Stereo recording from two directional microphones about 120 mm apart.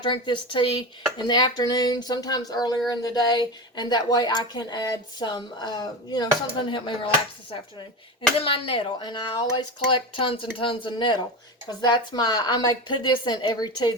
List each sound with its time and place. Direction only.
0.0 s speech: 40° left (ahead or behind)